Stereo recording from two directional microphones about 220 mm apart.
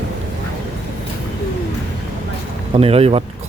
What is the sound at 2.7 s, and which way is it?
Speech, 25° right (ahead or behind).